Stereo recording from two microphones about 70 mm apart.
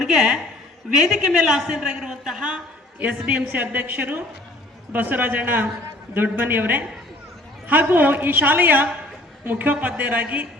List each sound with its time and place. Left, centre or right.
0.0 s a woman's voice: centre; by 10.4 s right